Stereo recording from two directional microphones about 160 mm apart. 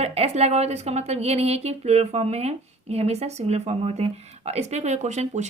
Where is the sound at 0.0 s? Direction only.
40° right (ahead or behind).